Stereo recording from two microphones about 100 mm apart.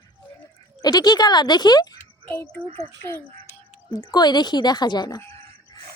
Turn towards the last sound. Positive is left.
turn(degrees=45)  # may be behind; listen again after turning